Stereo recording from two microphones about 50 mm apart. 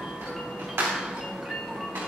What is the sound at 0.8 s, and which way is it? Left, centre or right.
Music, right.